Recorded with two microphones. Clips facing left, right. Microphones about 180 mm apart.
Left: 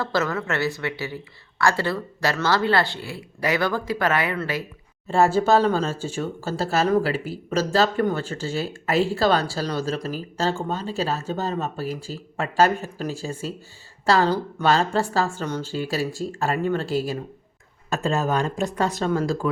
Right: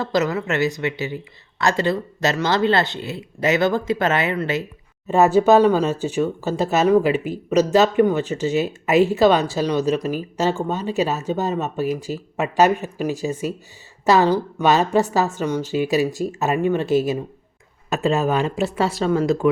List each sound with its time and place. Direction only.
0.0 s speech: 15° right (ahead or behind)
18.4 s speech: 5° right (ahead or behind)
19.2 s speech: 20° right (ahead or behind)